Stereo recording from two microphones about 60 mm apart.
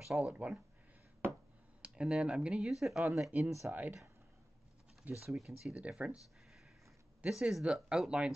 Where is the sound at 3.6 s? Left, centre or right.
Right.